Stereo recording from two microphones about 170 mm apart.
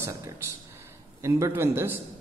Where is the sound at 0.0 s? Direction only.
15° right (ahead or behind).